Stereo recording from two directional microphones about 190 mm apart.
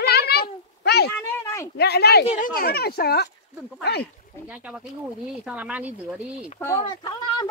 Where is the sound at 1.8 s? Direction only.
60° left (ahead or behind).